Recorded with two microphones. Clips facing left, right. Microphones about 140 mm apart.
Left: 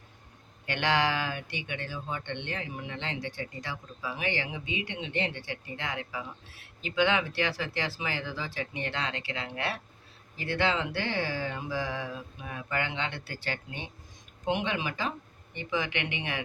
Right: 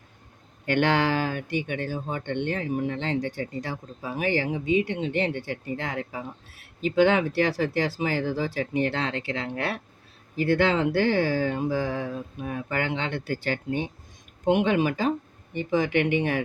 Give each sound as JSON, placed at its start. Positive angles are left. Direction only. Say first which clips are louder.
{"t": 0.6, "sound": "speech", "louder": "right 5 dB", "side_deg": -50}